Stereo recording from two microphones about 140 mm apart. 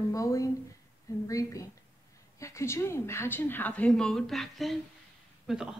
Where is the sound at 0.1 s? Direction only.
25° left (ahead or behind).